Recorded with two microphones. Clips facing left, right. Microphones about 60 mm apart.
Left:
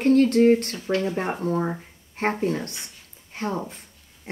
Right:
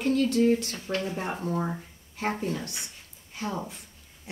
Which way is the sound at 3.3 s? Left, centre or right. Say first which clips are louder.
Left 5 dB; left.